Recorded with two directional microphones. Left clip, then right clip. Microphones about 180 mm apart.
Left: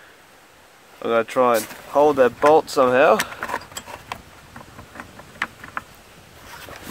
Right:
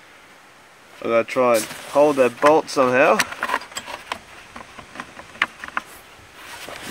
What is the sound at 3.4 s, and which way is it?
Mechanisms, 15° left (ahead or behind).